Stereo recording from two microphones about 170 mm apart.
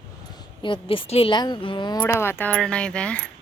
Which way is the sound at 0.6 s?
30° left (ahead or behind).